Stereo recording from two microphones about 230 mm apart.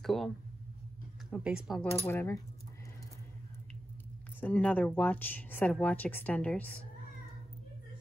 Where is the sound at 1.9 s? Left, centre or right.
Centre.